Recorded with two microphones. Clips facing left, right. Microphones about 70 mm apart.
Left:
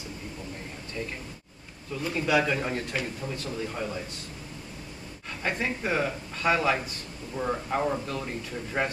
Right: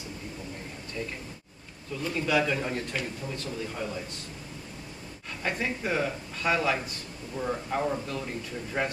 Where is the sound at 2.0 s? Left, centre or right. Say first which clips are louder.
Left 1 dB; centre.